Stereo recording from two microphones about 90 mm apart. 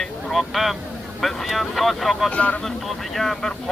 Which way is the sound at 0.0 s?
Centre (ahead or behind).